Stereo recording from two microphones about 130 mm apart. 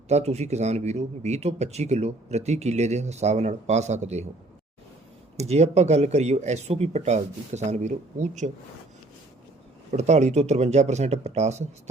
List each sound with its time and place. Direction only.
0.1 s a man's voice: 55° right (ahead or behind)
5.4 s a man's voice: 55° right (ahead or behind)
9.9 s a man's voice: 60° right (ahead or behind)